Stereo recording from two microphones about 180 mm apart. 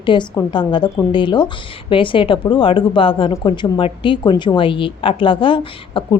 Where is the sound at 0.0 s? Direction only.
25° left (ahead or behind).